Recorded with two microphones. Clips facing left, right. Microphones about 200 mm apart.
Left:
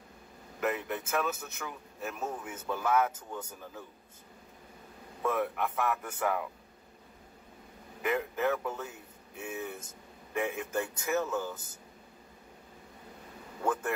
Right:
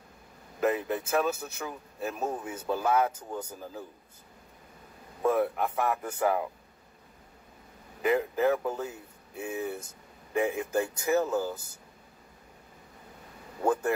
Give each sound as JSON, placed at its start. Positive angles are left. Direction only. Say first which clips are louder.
{"t": 0.6, "sound": "a man's voice", "louder": "right 5 dB", "side_deg": -30}
{"t": 5.2, "sound": "a man's voice", "louder": "right 5 dB", "side_deg": -30}
{"t": 8.0, "sound": "speech", "louder": "right 5 dB", "side_deg": -30}
{"t": 9.4, "sound": "speech", "louder": "right 5 dB", "side_deg": -20}
{"t": 10.8, "sound": "a man's voice", "louder": "right 5 dB", "side_deg": -30}
{"t": 13.6, "sound": "speech", "louder": "right 5 dB", "side_deg": -30}